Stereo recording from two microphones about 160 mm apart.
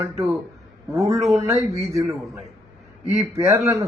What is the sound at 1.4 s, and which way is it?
A man's voice, 20° right (ahead or behind).